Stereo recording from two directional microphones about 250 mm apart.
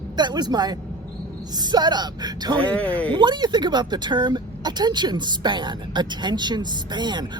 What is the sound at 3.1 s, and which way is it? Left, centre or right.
A woman's voice, centre.